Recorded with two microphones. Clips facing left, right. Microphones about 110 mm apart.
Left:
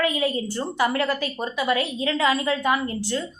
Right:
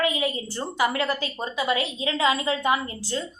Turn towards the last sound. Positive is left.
turn(degrees=-25)  # may be behind; listen again after turning